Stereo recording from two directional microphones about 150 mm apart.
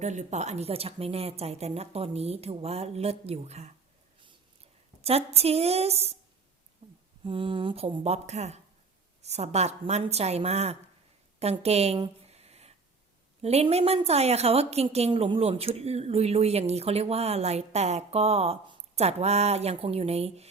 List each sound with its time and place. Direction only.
0.0 s a woman's voice: 50° right (ahead or behind)
5.0 s a woman's voice: 45° right (ahead or behind)
6.8 s a sound: 40° right (ahead or behind)
7.3 s a woman's voice: 35° right (ahead or behind)
11.9 s speech: 30° right (ahead or behind)
12.3 s a sound: 45° right (ahead or behind)
13.4 s a woman's voice: 45° right (ahead or behind)